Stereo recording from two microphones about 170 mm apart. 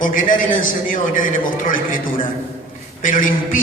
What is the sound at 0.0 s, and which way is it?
A man's voice, 50° left (ahead or behind).